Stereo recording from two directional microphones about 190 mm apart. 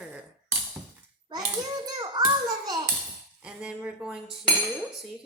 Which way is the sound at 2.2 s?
20° right (ahead or behind).